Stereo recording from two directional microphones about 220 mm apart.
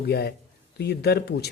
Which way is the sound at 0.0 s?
45° left (ahead or behind).